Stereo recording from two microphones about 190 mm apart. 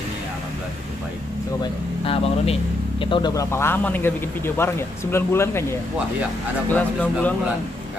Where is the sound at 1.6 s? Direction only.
30° left (ahead or behind); by 7.3 s 10° left (ahead or behind).